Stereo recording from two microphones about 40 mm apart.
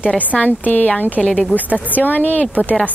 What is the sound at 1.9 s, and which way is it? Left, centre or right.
Speech, left.